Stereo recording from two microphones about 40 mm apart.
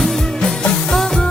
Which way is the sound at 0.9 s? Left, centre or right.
Centre.